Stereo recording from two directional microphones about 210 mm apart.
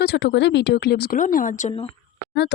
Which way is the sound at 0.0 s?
55° left (ahead or behind).